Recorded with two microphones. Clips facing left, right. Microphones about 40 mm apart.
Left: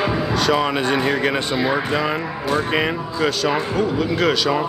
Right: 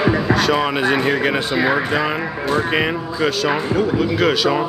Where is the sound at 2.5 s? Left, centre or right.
Centre.